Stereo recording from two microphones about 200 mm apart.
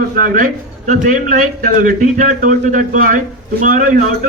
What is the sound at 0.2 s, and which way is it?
A man's voice, 40° right (ahead or behind).